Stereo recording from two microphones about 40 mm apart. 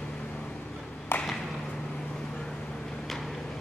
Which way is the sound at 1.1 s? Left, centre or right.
Left.